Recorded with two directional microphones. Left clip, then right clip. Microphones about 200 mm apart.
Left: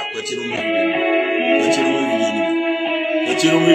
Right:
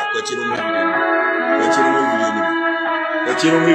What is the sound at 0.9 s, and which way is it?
Music, 5° right (ahead or behind).